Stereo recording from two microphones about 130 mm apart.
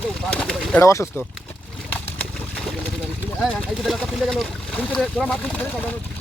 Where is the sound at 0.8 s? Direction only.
20° left (ahead or behind).